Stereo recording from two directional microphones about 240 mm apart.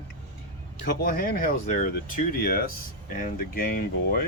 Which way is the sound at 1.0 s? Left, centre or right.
Left.